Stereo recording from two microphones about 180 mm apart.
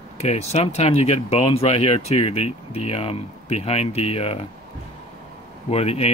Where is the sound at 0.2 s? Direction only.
35° left (ahead or behind).